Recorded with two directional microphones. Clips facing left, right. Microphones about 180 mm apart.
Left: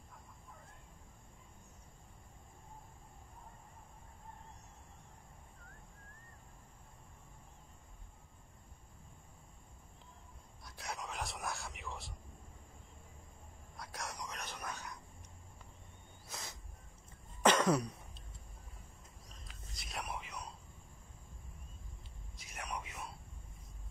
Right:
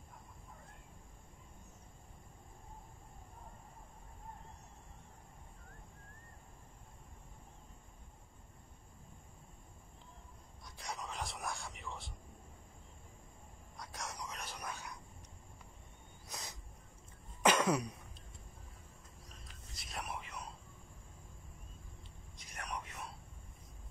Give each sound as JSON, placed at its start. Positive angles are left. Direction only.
{"t": 10.6, "sound": "speech", "side_deg": 0}
{"t": 13.7, "sound": "whispering", "side_deg": 0}
{"t": 16.3, "sound": "a sound", "side_deg": -20}
{"t": 17.4, "sound": "cough", "side_deg": -10}
{"t": 19.7, "sound": "music", "side_deg": 0}
{"t": 22.6, "sound": "whispering", "side_deg": 5}